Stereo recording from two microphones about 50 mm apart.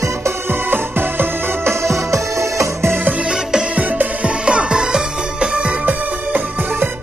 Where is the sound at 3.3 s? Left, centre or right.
Centre.